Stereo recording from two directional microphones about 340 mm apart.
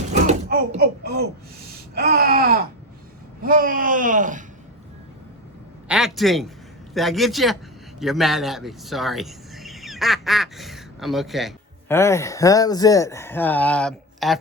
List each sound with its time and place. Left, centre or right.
0.1 s a sound: right
3.4 s speech: right
5.9 s a man's voice: centre